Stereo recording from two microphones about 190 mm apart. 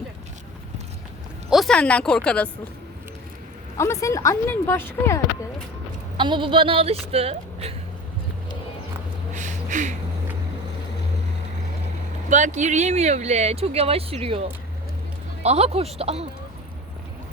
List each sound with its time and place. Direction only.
1.5 s speech: centre (ahead or behind)
3.8 s speech: 15° left (ahead or behind)
6.1 s speech: 25° right (ahead or behind)
9.3 s a sound: 40° right (ahead or behind)
12.3 s speech: 40° right (ahead or behind)
15.4 s speech: 30° right (ahead or behind)